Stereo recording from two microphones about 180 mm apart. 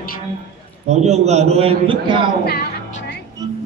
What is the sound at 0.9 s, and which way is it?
A man's voice, 35° right (ahead or behind).